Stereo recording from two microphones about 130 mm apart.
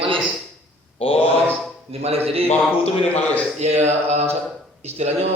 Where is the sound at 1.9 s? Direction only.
50° right (ahead or behind).